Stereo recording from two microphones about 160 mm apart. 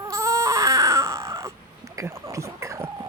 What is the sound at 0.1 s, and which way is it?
Baby cry, 20° right (ahead or behind).